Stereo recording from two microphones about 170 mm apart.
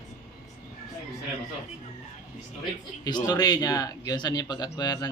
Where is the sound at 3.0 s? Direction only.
25° left (ahead or behind).